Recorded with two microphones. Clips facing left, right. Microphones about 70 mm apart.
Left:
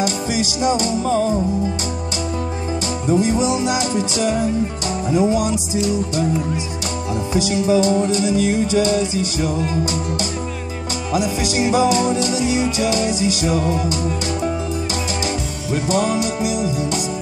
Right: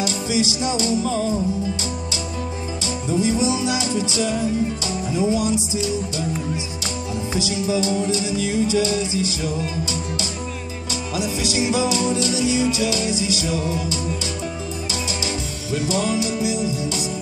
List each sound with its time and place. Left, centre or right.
0.0 s music: left
3.1 s music: left
11.1 s music: left
15.2 s music: left